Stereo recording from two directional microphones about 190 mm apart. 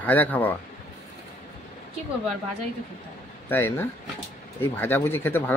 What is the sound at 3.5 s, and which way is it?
Speech, 10° left (ahead or behind).